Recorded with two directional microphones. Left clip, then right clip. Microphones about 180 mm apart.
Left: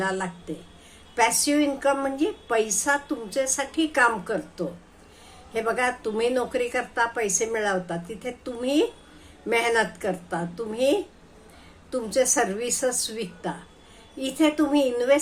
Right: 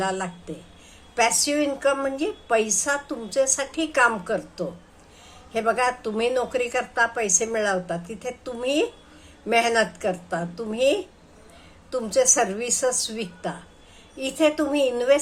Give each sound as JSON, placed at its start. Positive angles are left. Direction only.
{"t": 0.0, "sound": "a woman's voice", "side_deg": -10}